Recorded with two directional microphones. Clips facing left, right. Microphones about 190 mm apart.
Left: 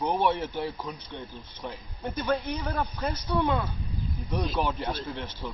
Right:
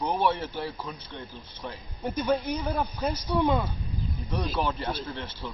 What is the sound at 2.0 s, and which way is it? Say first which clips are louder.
Speech: right 2 dB; 10° right (ahead or behind).